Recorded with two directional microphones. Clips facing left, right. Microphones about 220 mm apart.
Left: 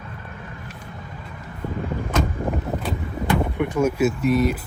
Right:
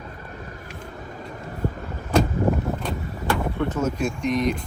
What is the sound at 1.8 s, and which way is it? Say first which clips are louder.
Vehicle: right 2 dB; 40° right (ahead or behind).